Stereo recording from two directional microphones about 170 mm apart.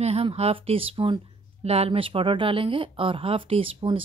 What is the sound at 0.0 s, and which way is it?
A woman's voice, 35° right (ahead or behind).